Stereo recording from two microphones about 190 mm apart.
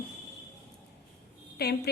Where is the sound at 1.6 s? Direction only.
55° left (ahead or behind).